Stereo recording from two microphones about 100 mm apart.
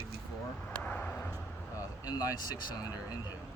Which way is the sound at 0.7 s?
15° left (ahead or behind).